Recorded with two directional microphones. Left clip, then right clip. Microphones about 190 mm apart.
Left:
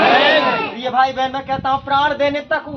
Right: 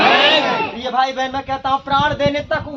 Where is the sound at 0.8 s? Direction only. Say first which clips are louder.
Left 2 dB; centre (ahead or behind).